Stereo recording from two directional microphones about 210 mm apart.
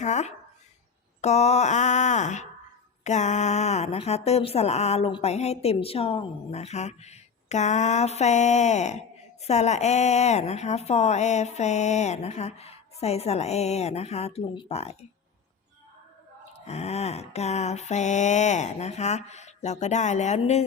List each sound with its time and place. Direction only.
0.0 s speech: 35° left (ahead or behind)
16.6 s speech: 30° left (ahead or behind)